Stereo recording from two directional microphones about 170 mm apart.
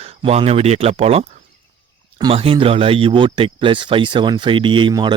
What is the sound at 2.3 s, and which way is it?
Speech, 35° right (ahead or behind).